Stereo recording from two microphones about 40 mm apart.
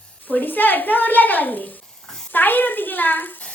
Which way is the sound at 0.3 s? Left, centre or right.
Left.